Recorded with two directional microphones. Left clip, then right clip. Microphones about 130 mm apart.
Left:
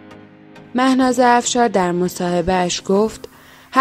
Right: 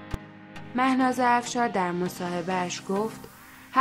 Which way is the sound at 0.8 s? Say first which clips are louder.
Left 9 dB; 40° left (ahead or behind).